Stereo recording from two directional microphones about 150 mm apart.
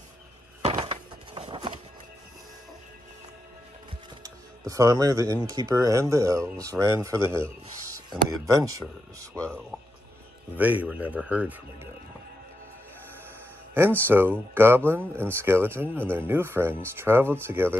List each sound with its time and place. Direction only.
0.7 s a sound: 30° right (ahead or behind)
4.2 s speech: 20° right (ahead or behind)
10.5 s speech: 10° right (ahead or behind)
14.0 s speech: 15° right (ahead or behind)